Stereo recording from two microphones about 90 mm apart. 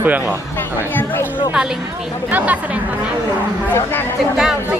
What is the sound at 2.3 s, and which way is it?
Speech, 20° right (ahead or behind).